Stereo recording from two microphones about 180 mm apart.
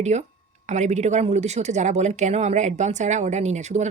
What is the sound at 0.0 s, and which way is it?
A woman's voice, 40° right (ahead or behind).